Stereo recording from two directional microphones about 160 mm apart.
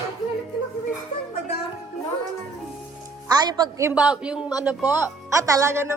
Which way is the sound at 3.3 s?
25° right (ahead or behind).